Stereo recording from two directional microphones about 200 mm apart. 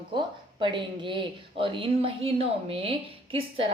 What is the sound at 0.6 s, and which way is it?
A woman's voice, 25° right (ahead or behind).